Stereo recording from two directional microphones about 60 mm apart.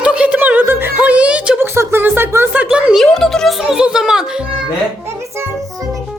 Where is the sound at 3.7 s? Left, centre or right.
Centre.